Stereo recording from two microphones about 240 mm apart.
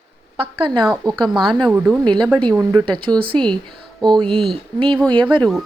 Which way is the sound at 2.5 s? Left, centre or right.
Centre.